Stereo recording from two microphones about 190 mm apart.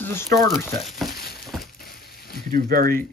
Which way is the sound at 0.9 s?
Centre (ahead or behind).